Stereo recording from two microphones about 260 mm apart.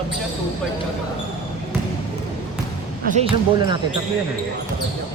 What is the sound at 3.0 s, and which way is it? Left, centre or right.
Speech, right.